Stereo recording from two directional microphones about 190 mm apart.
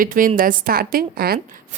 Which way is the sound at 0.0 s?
45° right (ahead or behind).